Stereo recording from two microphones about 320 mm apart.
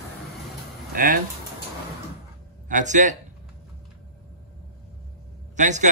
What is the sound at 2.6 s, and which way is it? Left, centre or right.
Speech, right.